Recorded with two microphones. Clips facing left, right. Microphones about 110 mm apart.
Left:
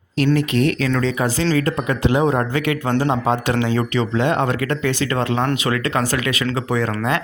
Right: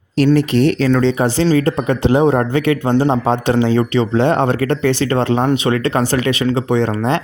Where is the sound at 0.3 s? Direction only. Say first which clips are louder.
Right 5 dB; 30° right (ahead or behind).